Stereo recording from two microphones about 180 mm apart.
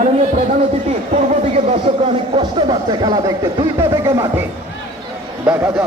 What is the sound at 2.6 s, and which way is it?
Speech, 20° right (ahead or behind).